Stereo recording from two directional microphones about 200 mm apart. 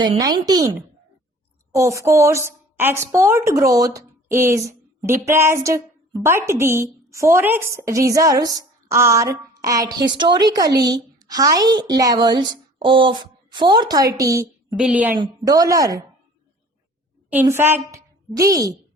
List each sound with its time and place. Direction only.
0.0 s a woman's voice: 20° right (ahead or behind); by 15.1 s 5° right (ahead or behind)
15.2 s a woman's voice: 20° right (ahead or behind)
17.2 s a woman's voice: 10° right (ahead or behind)